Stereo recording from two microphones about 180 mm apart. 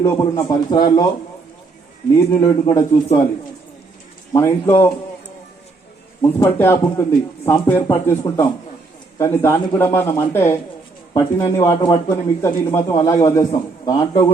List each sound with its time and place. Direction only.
0.0 s a man's voice: 20° left (ahead or behind)
2.3 s a man's voice: 20° left (ahead or behind)
4.3 s speech: 15° left (ahead or behind)
6.2 s a man's voice: 10° left (ahead or behind)